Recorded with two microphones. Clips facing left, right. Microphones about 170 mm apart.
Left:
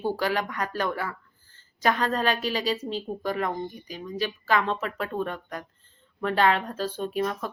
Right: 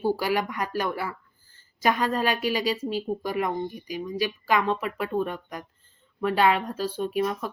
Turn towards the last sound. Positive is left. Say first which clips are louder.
# right 2 dB
turn(degrees=-10)  # may be behind; listen again after turning